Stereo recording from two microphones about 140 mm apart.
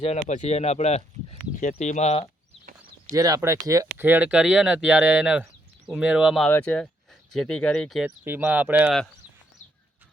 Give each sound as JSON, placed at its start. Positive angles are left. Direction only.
{"t": 0.0, "sound": "speech", "side_deg": 55}
{"t": 3.1, "sound": "speech", "side_deg": -25}
{"t": 4.0, "sound": "speech", "side_deg": -10}
{"t": 6.5, "sound": "speech", "side_deg": 10}
{"t": 8.2, "sound": "speech", "side_deg": -15}